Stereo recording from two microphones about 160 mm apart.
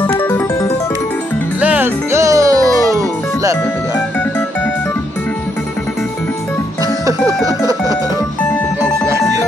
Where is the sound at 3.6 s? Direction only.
15° left (ahead or behind).